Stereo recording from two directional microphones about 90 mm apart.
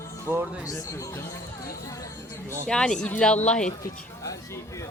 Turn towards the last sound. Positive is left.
turn(degrees=35)  # may be behind; listen again after turning